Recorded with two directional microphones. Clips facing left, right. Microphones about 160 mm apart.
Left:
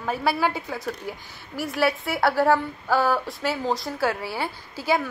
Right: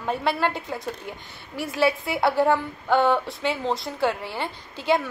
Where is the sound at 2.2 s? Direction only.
Centre (ahead or behind).